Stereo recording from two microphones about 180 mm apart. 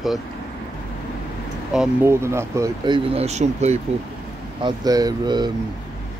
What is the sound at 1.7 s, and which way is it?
Speech, 5° right (ahead or behind).